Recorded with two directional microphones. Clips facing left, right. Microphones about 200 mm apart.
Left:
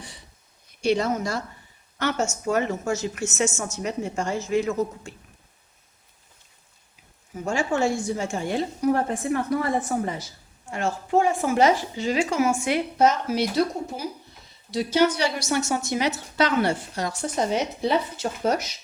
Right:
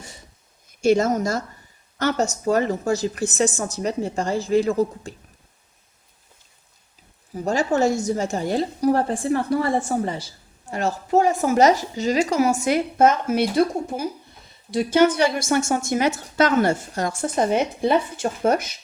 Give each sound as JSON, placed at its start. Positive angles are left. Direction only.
{"t": 0.0, "sound": "a sound", "side_deg": -45}
{"t": 0.7, "sound": "a woman's voice", "side_deg": -45}
{"t": 7.3, "sound": "a woman's voice", "side_deg": -40}